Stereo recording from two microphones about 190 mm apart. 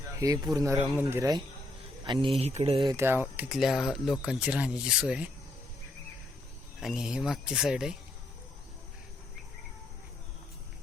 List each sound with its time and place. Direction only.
0.5 s a man's voice: 15° right (ahead or behind); by 2.9 s 30° right (ahead or behind)
2.9 s speech: 10° right (ahead or behind)
6.7 s speech: centre (ahead or behind)